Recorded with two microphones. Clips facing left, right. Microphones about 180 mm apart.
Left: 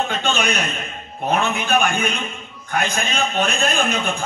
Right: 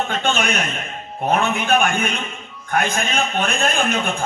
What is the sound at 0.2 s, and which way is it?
Speech, 50° right (ahead or behind).